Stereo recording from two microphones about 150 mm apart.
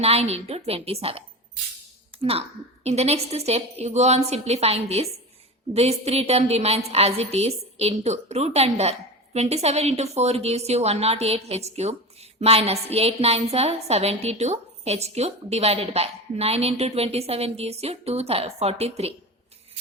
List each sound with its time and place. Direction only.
0.0 s a woman's voice: 40° right (ahead or behind)